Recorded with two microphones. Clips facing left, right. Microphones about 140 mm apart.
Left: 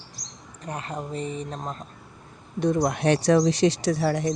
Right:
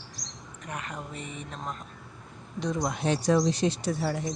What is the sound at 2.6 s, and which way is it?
Speech, 60° left (ahead or behind).